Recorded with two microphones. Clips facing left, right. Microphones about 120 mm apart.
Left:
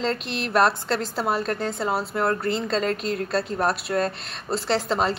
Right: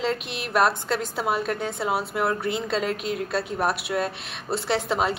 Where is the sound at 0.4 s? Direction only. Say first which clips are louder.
Left 2 dB; 5° right (ahead or behind).